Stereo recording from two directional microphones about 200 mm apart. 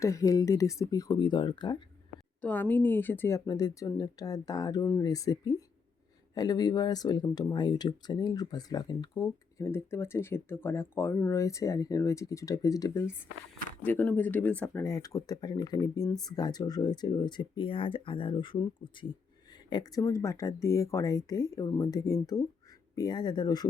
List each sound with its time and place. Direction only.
0.0 s speech: 15° left (ahead or behind)
2.4 s speech: 10° left (ahead or behind)